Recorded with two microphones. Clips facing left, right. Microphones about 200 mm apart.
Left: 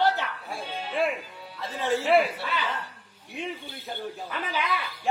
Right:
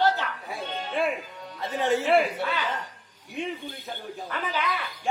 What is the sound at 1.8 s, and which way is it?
Speech, 20° right (ahead or behind).